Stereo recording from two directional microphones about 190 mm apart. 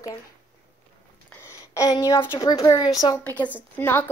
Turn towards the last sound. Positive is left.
turn(degrees=10)  # may be behind; listen again after turning